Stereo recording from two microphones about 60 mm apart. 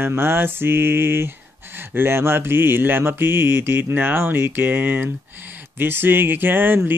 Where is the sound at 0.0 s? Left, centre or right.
Right.